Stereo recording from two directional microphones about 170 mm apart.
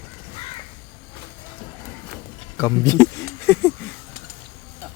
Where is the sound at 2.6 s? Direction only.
20° left (ahead or behind).